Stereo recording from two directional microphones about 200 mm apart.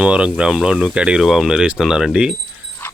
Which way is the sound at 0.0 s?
5° right (ahead or behind).